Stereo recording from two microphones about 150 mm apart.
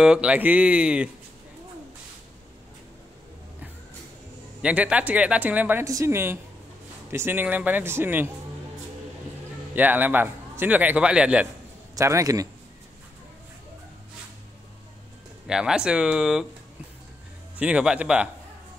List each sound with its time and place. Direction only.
0.0 s speech: 5° right (ahead or behind)
4.6 s speech: 10° right (ahead or behind)
9.8 s speech: 10° right (ahead or behind)
11.9 s speech: 20° right (ahead or behind)
15.4 s speech: 5° right (ahead or behind)
17.6 s speech: 10° right (ahead or behind)